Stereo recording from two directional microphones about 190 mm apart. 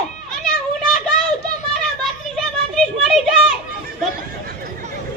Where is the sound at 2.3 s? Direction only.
Centre (ahead or behind).